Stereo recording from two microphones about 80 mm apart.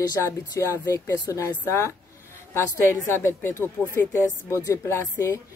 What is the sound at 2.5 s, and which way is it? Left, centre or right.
Speech, left.